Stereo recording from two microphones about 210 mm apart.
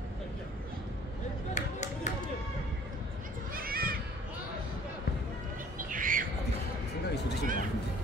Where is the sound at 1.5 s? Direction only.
35° left (ahead or behind).